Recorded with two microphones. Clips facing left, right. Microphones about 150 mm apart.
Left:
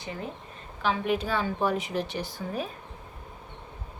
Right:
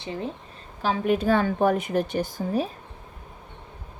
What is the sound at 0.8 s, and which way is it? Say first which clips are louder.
A woman's voice: right 4 dB; 40° right (ahead or behind).